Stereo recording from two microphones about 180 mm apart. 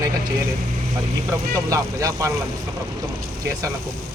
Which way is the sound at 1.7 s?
20° right (ahead or behind).